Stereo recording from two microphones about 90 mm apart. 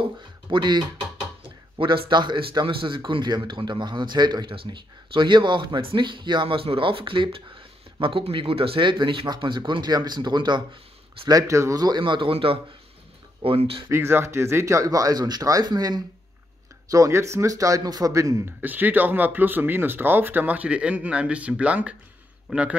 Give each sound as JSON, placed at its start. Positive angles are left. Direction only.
{"t": 0.5, "sound": "speech", "side_deg": -55}
{"t": 4.5, "sound": "speech", "side_deg": -65}
{"t": 11.2, "sound": "speech", "side_deg": -40}
{"t": 12.0, "sound": "speech", "side_deg": -65}
{"t": 13.8, "sound": "speech", "side_deg": -25}
{"t": 16.9, "sound": "speech", "side_deg": -35}
{"t": 18.6, "sound": "a man's voice", "side_deg": -20}